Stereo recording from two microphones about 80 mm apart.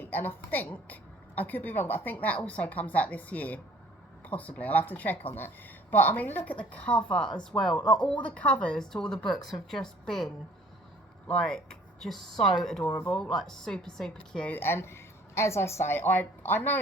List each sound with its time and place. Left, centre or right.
0.0 s a woman's voice: left; by 10.2 s centre
11.3 s speech: centre
12.8 s a woman's voice: left
13.1 s speech: centre
14.5 s a woman's voice: left